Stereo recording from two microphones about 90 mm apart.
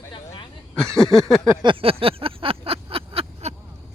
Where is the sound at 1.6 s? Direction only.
85° right.